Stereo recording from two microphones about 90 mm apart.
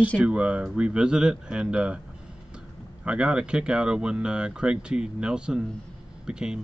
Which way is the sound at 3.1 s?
10° right (ahead or behind).